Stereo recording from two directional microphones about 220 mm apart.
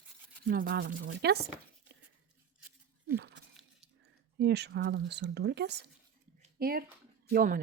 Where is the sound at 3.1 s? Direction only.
50° right (ahead or behind).